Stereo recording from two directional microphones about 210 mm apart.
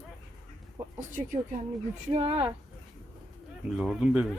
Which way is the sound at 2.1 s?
25° right (ahead or behind).